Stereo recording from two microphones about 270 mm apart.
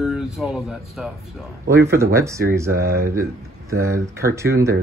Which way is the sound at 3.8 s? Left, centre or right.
Centre.